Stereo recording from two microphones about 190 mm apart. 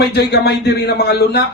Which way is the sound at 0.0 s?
60° left (ahead or behind).